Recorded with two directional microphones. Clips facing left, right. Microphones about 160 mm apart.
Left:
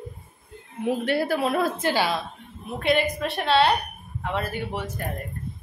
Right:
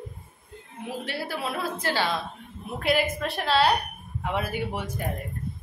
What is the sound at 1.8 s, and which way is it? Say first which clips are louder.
Speech: left 3 dB; 15° left (ahead or behind).